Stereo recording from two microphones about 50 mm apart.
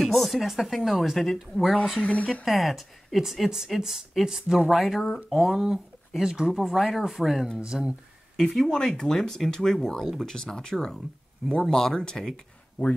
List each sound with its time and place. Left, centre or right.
0.0 s speech: centre
2.0 s speech: left
2.4 s speech: centre
8.4 s speech: centre